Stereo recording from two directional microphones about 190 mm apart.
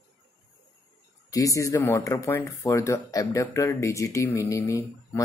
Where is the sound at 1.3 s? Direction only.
15° left (ahead or behind).